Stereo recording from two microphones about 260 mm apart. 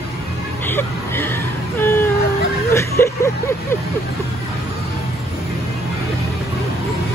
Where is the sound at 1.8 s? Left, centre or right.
Centre.